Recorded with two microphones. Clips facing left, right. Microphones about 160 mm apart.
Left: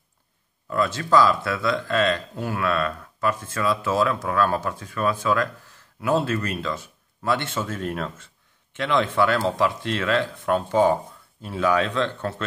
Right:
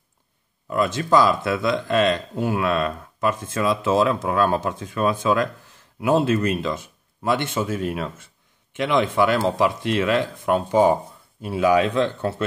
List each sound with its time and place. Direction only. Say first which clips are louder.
0.7 s speech: right 2 dB; 20° right (ahead or behind)